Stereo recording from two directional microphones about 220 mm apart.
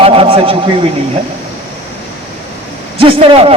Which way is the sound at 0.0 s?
25° right (ahead or behind).